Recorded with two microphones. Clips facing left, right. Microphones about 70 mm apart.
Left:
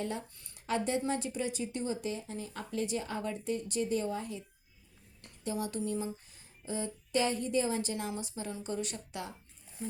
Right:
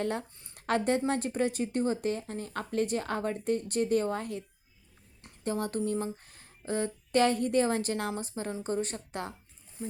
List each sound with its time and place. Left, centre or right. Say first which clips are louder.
0.0 s speech: right 5 dB; right
5.4 s a sound: right 4 dB; right
8.1 s speech: right 4 dB; right